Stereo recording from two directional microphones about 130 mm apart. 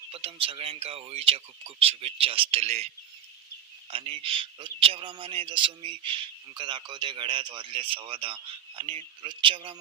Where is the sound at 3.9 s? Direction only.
45° right (ahead or behind).